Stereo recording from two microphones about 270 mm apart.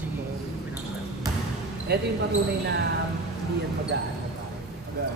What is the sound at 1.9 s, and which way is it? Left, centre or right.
Speech, right.